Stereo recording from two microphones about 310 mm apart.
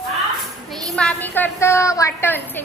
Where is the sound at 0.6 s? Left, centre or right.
Centre.